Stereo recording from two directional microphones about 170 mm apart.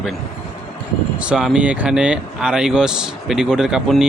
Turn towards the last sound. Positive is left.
turn(degrees=0)  # may be behind; listen again after turning